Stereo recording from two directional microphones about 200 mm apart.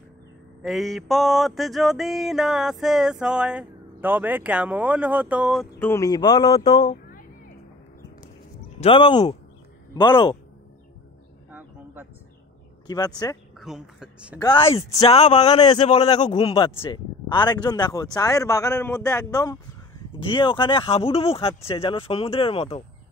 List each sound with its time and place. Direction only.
0.6 s mantra: centre (ahead or behind)
5.8 s speech: 15° left (ahead or behind)
6.6 s speech: 35° left (ahead or behind)
8.7 s speech: 25° left (ahead or behind)
11.5 s a sound: 10° right (ahead or behind)
12.8 s speech: 20° left (ahead or behind)
13.6 s speech: centre (ahead or behind)
14.4 s speech: 20° left (ahead or behind)